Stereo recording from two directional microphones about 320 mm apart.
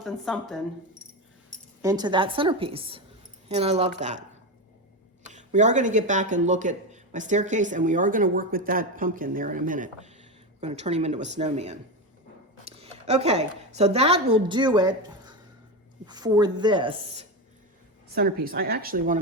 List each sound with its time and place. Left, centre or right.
0.0 s speech: centre
1.8 s a woman's voice: centre
5.2 s speech: right
12.6 s a sound: centre
13.7 s a woman's voice: centre
18.1 s speech: right